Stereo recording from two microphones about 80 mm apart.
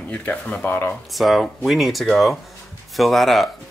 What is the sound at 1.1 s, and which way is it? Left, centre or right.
Speech, centre.